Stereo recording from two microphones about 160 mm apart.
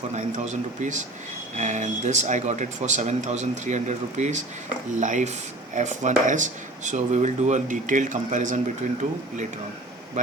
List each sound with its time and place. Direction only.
0.1 s speech: 45° right (ahead or behind)